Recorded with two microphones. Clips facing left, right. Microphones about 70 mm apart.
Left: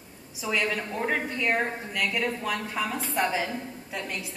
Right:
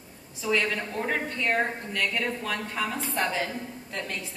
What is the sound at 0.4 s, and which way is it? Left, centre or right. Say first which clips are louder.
A woman's voice: right 1 dB; centre.